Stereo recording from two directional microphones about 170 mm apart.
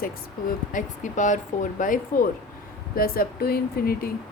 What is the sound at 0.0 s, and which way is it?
A woman's voice, 55° left (ahead or behind).